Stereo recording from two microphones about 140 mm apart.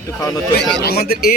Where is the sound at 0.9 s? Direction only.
90° left.